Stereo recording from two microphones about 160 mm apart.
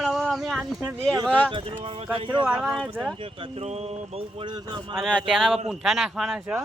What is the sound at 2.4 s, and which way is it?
Speech, 5° right (ahead or behind).